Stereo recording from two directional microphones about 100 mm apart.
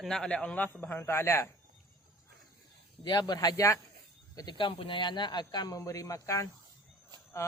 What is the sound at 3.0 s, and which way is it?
Speech, 45° left (ahead or behind).